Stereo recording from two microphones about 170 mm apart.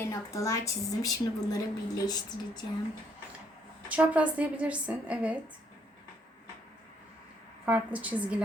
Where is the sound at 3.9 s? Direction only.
10° right (ahead or behind).